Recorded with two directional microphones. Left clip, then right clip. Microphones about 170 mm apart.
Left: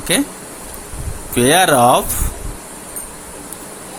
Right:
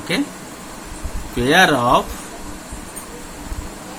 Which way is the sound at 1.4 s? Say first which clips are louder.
Left 3 dB; 65° left (ahead or behind).